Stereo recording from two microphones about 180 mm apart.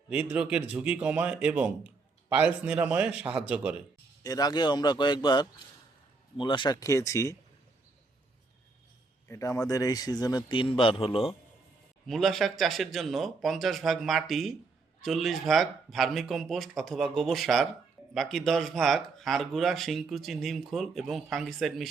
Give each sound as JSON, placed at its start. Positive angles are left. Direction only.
{"t": 0.1, "sound": "a man's voice", "side_deg": -5}
{"t": 4.2, "sound": "a man's voice", "side_deg": 20}
{"t": 9.3, "sound": "a man's voice", "side_deg": 20}
{"t": 12.0, "sound": "speech", "side_deg": 0}